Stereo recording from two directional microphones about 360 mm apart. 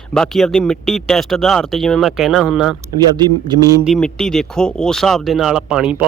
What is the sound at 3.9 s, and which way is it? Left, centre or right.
A man's voice, centre.